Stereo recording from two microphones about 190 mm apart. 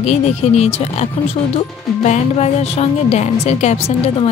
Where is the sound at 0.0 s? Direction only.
35° left (ahead or behind).